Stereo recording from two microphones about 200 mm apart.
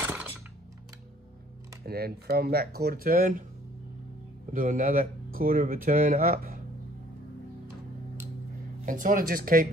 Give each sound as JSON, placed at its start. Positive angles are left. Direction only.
{"t": 0.0, "sound": "a sound", "side_deg": -10}
{"t": 1.9, "sound": "speech", "side_deg": -50}
{"t": 4.5, "sound": "speech", "side_deg": -40}
{"t": 8.8, "sound": "speech", "side_deg": -40}